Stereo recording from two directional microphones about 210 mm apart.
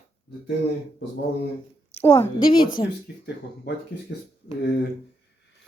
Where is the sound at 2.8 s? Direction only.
25° left (ahead or behind).